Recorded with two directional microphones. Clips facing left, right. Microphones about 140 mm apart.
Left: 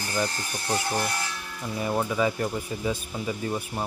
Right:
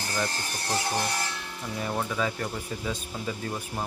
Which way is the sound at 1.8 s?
10° left (ahead or behind).